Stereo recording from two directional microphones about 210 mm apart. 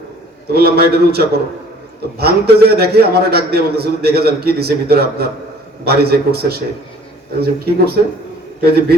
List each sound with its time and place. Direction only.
0.5 s a man's voice: 50° right (ahead or behind)